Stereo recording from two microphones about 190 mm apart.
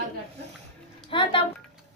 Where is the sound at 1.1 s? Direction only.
25° left (ahead or behind).